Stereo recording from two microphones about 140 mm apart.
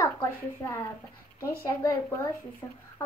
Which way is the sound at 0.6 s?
20° left (ahead or behind).